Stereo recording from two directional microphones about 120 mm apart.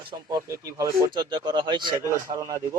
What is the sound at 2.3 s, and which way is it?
Speech, 25° right (ahead or behind).